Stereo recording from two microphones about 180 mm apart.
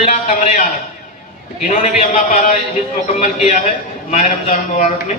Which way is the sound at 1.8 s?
40° left (ahead or behind).